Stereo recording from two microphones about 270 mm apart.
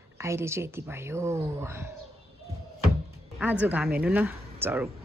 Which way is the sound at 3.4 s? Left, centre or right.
Centre.